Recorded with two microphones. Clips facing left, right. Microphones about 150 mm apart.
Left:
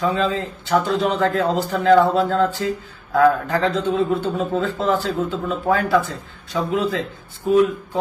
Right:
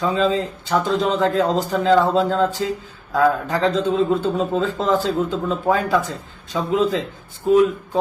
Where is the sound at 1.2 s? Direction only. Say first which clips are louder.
Right 1 dB; 20° right (ahead or behind).